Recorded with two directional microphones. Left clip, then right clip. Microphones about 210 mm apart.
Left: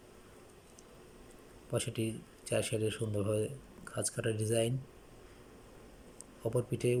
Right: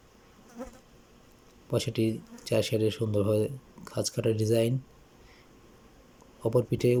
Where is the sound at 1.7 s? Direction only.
20° right (ahead or behind).